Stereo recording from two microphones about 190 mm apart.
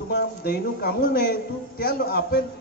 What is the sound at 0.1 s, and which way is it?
A man's voice, 55° left (ahead or behind).